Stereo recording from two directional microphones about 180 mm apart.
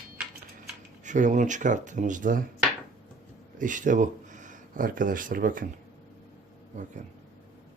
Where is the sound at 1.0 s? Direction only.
45° right (ahead or behind).